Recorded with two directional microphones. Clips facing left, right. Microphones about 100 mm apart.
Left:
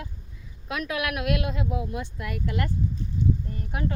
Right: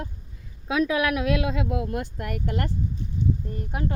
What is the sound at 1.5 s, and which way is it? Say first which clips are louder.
Speech: right 3 dB; 85° right.